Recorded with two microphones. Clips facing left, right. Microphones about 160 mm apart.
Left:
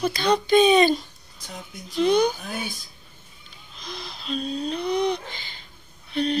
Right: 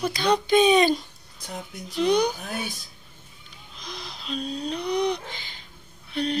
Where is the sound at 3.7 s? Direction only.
15° right (ahead or behind).